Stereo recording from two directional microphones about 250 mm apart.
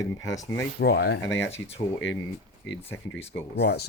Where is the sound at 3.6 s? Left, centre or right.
Left.